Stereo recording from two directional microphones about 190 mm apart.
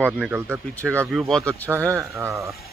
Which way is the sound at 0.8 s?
5° left (ahead or behind).